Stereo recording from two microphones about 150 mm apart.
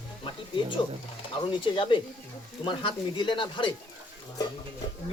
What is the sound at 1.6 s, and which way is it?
Speech, 35° left (ahead or behind).